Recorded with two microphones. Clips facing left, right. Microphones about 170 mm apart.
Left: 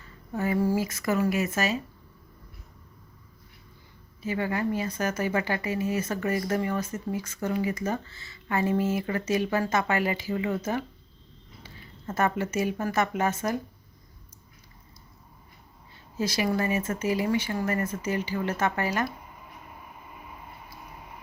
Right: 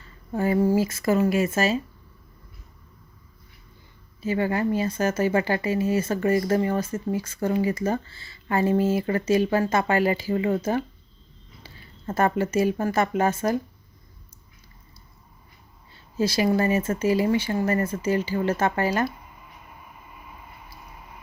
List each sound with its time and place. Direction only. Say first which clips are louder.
0.3 s speech: right 4 dB; 30° right (ahead or behind)
4.2 s speech: right 4 dB; 30° right (ahead or behind)
16.1 s speech: right 5 dB; 30° right (ahead or behind)